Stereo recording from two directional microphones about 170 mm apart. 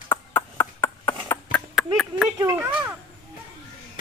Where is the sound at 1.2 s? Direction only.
15° left (ahead or behind).